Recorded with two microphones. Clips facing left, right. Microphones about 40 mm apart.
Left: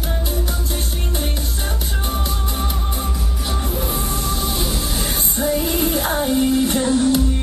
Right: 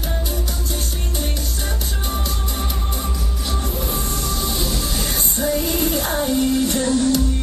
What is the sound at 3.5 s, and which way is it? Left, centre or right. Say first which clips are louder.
Music: left 1 dB; centre.